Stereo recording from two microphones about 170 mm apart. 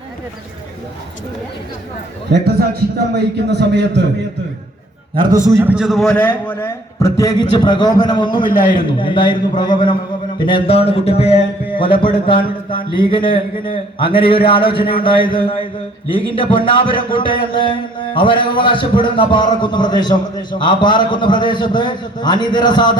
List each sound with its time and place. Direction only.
2.3 s a man's voice: 70° right (ahead or behind)
3.5 s a man's voice: 85° right
5.1 s a man's voice: 25° right (ahead or behind)
5.5 s a man's voice: 15° right (ahead or behind); by 23.0 s 25° left (ahead or behind)